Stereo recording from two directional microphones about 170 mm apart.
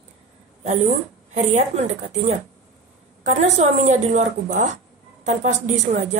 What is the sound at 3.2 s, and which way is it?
Speech, 40° right (ahead or behind).